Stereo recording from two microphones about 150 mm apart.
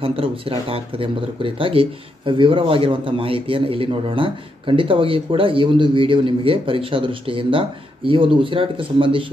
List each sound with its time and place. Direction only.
0.0 s speech: 35° right (ahead or behind)